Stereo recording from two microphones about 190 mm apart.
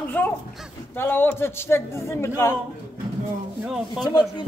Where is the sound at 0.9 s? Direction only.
10° left (ahead or behind).